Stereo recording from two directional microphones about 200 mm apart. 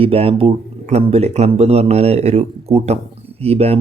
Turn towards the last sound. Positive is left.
turn(degrees=-30)  # may be behind; listen again after turning